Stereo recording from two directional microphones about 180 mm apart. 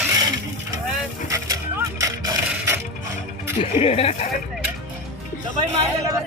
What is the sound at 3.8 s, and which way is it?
Speech, 35° left (ahead or behind).